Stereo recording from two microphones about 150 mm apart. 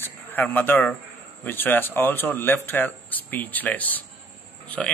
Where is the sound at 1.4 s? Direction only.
15° left (ahead or behind).